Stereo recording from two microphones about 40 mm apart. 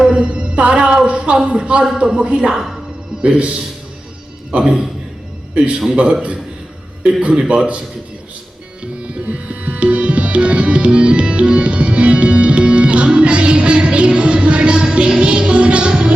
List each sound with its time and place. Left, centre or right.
0.0 s music: right
1.0 s a man's voice: right
2.5 s a man's voice: centre
3.2 s a man's voice: right
4.5 s a man's voice: centre
6.0 s a man's voice: centre
7.0 s a man's voice: right
8.8 s tabla: right
15.9 s a man's voice: right